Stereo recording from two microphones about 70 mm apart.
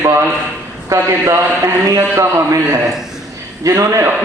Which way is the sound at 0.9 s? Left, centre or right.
Right.